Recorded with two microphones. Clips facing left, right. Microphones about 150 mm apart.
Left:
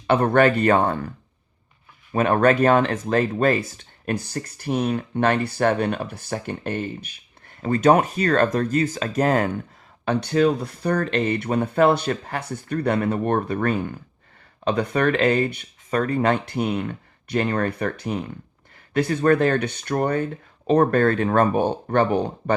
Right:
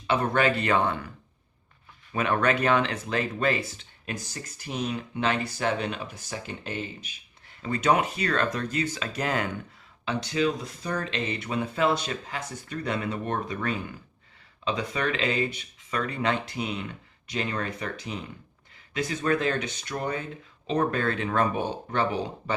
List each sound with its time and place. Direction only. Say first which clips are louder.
0.1 s speech: left 7 dB; 55° left (ahead or behind)
2.1 s speech: left 7 dB; 45° left (ahead or behind)
10.1 s speech: left 7 dB; 60° left (ahead or behind)